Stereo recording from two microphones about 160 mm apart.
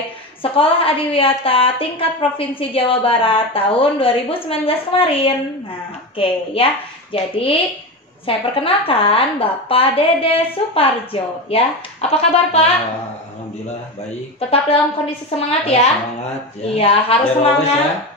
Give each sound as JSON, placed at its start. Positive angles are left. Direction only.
{"t": 0.4, "sound": "a woman's voice", "side_deg": 35}
{"t": 15.3, "sound": "a woman's voice", "side_deg": 40}